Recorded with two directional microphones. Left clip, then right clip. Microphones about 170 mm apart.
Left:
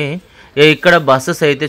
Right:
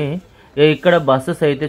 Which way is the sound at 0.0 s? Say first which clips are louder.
Left 3 dB; 25° left (ahead or behind).